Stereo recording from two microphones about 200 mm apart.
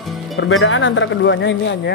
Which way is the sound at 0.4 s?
80° left.